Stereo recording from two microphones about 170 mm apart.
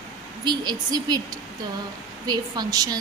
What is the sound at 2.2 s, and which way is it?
Speech, 25° right (ahead or behind).